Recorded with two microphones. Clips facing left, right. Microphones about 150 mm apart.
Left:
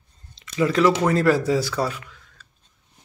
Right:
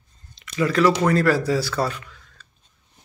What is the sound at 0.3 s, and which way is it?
Speech, 25° left (ahead or behind).